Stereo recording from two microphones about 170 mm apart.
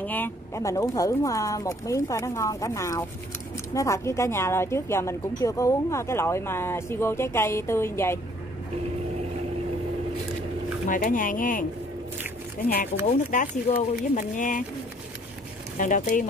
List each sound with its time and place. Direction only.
0.0 s a woman's voice: 10° left (ahead or behind)
10.9 s speech: 50° left (ahead or behind)
13.0 s speech: 45° left (ahead or behind)
15.8 s speech: 50° left (ahead or behind)